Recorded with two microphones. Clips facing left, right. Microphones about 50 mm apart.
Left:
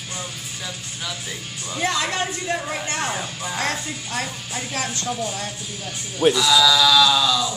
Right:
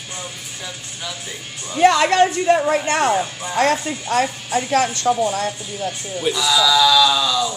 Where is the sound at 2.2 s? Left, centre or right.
Right.